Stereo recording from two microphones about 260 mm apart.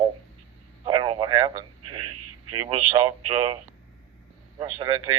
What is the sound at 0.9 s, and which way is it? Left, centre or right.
Speech, centre.